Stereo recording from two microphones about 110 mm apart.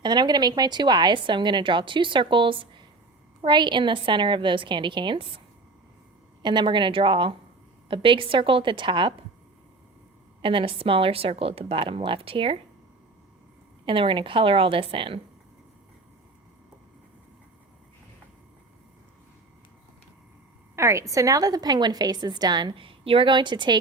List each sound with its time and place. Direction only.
0.0 s a woman's voice: 40° right (ahead or behind)
6.4 s a woman's voice: 45° right (ahead or behind)
10.4 s a woman's voice: 50° right (ahead or behind)
13.8 s a woman's voice: 50° right (ahead or behind)
20.7 s a woman's voice: 25° right (ahead or behind); by 23.7 s 45° right (ahead or behind)